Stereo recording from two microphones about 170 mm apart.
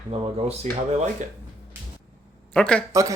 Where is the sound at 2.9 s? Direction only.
20° right (ahead or behind).